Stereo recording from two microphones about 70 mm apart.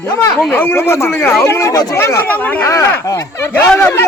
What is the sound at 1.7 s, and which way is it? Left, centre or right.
Speech, left.